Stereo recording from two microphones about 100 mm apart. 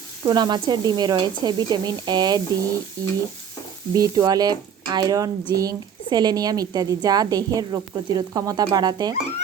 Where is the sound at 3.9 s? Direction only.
35° right (ahead or behind).